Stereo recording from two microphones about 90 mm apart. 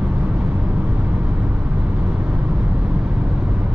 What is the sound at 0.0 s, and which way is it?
Vehicle, 15° right (ahead or behind).